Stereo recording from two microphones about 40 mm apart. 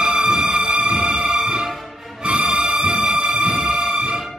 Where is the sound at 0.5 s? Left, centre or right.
Right.